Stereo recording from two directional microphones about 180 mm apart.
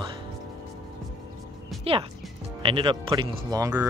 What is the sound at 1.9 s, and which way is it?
Speech, 30° right (ahead or behind).